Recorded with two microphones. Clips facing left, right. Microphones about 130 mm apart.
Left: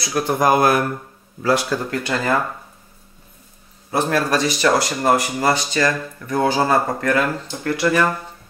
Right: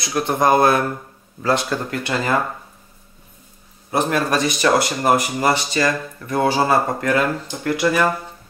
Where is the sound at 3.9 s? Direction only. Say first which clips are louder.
Even; 20° right (ahead or behind).